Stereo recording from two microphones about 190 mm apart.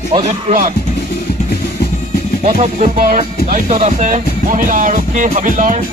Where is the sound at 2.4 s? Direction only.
35° right (ahead or behind).